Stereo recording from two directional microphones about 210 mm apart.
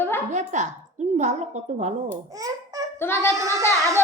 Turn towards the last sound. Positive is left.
turn(degrees=-15)  # may be behind; listen again after turning